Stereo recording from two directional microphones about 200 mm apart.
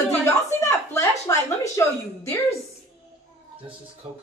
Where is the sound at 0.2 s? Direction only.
15° left (ahead or behind).